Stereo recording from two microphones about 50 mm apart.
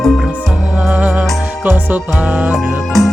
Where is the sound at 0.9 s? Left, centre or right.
Right.